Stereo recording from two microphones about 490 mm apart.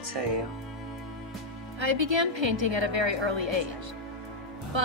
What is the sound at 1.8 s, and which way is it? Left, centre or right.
Speech, right.